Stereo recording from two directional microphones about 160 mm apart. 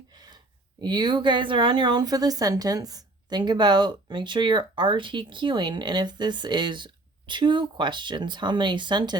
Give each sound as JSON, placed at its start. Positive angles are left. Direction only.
{"t": 0.8, "sound": "a woman's voice", "side_deg": -25}